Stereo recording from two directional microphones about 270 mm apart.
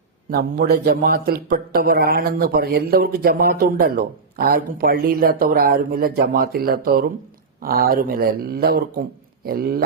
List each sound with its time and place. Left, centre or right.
0.3 s a man's voice: right